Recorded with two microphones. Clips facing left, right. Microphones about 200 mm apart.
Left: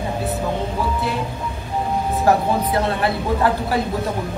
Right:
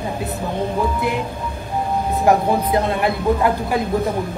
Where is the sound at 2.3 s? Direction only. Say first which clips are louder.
Right 2 dB; 15° right (ahead or behind).